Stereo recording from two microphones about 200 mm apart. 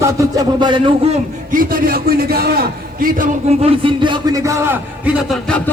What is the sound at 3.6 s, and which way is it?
A man's voice, 25° right (ahead or behind).